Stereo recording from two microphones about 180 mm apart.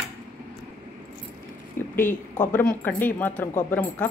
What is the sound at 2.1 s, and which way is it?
Speech, 45° left (ahead or behind).